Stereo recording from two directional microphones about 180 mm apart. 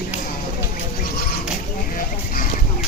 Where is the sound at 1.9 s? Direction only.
50° left (ahead or behind).